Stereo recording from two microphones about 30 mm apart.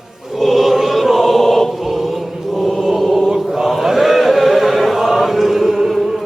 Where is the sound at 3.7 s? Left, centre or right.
Centre.